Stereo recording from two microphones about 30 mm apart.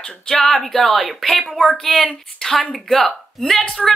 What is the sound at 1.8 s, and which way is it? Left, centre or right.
Speech, centre.